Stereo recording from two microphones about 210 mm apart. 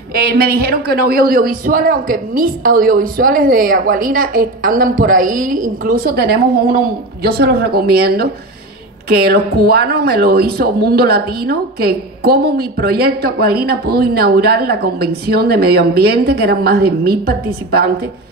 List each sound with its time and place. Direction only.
0.1 s a woman's voice: 45° right (ahead or behind)